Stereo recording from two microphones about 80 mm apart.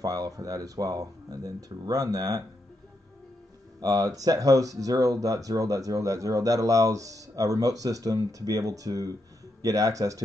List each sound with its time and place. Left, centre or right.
0.0 s speech: right
3.8 s speech: right